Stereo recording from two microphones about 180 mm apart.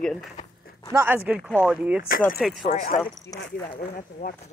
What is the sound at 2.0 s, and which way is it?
Speech, 50° left (ahead or behind).